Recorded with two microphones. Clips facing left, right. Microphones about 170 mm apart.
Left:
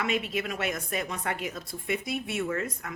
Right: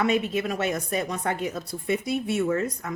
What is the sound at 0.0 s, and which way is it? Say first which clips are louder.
A woman's voice: right 6 dB; 40° right (ahead or behind).